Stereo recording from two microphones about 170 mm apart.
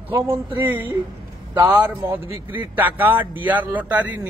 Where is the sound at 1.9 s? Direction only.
10° right (ahead or behind).